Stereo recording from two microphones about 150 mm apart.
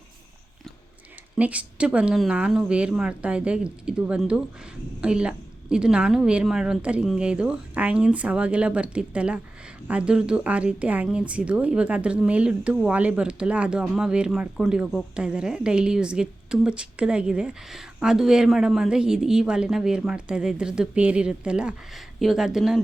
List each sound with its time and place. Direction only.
1.4 s speech: 10° right (ahead or behind)